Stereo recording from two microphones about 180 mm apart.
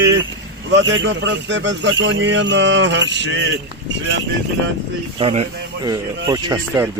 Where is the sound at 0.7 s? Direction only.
85° right.